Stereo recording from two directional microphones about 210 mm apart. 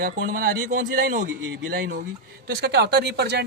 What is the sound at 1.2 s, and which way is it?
Speech, 50° right (ahead or behind).